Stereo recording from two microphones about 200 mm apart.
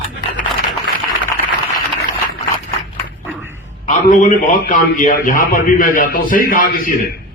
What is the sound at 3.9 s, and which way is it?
A man's voice, 40° left (ahead or behind).